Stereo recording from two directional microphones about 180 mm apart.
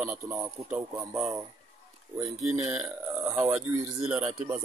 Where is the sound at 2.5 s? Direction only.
15° right (ahead or behind).